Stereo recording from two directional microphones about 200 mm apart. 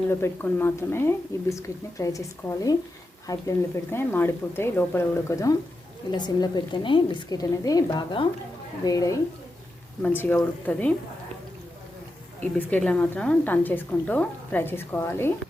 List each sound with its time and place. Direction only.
0.1 s a woman's voice: 10° left (ahead or behind)
12.4 s a woman's voice: 10° left (ahead or behind)